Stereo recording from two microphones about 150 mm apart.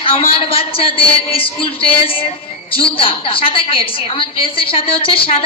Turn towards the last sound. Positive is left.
turn(degrees=40)  # may be behind; listen again after turning